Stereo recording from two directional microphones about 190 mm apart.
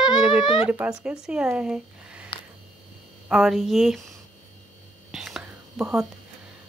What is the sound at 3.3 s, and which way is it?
Speech, centre (ahead or behind).